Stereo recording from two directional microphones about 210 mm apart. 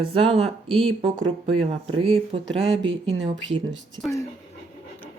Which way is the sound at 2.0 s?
25° right (ahead or behind).